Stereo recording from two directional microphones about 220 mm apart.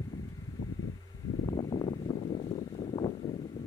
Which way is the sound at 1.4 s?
15° left (ahead or behind).